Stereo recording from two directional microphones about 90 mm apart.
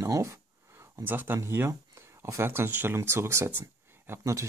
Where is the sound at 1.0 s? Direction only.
20° right (ahead or behind).